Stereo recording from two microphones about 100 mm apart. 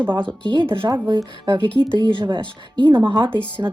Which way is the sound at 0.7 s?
60° right (ahead or behind).